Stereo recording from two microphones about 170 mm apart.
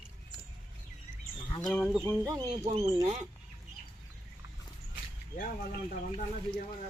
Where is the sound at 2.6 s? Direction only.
40° right (ahead or behind).